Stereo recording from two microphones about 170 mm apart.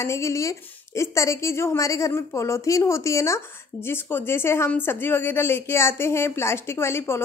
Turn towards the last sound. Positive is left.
turn(degrees=15)  # may be behind; listen again after turning